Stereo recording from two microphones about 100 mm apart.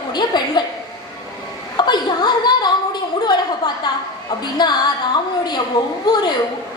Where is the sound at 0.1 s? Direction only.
45° left (ahead or behind).